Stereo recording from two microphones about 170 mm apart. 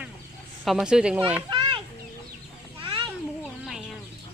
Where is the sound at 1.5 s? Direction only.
25° right (ahead or behind).